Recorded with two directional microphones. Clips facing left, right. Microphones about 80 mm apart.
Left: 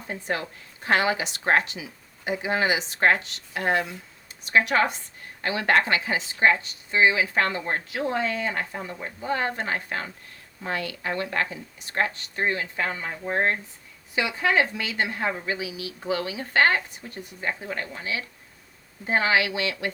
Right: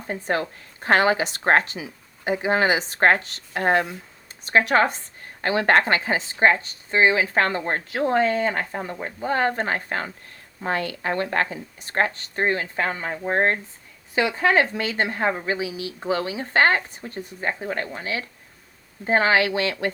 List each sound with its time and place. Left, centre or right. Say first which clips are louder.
0.1 s speech: right 5 dB; right